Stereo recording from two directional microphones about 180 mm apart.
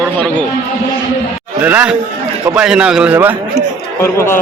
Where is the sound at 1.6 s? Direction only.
10° right (ahead or behind).